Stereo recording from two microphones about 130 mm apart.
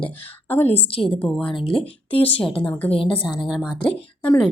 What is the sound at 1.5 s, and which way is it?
Speech, 40° left (ahead or behind).